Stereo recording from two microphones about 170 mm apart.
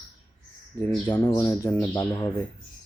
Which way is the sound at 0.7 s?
15° left (ahead or behind).